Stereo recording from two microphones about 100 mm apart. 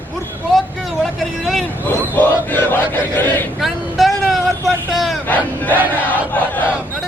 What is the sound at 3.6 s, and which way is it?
Vehicle, centre (ahead or behind).